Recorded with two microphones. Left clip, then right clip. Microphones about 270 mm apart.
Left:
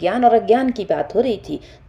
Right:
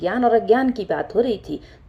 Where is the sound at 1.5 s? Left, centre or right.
Left.